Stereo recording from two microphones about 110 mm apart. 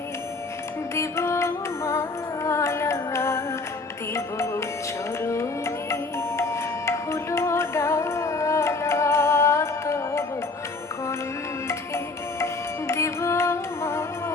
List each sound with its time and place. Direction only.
0.9 s music: 25° left (ahead or behind)
12.9 s music: 25° left (ahead or behind)